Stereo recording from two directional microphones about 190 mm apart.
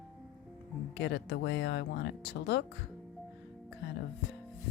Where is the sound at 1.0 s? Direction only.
65° left (ahead or behind).